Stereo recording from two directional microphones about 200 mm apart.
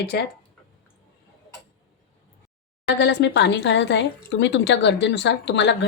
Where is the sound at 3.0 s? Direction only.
60° left (ahead or behind).